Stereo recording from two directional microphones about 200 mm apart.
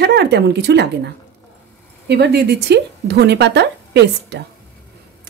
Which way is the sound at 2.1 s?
55° right (ahead or behind).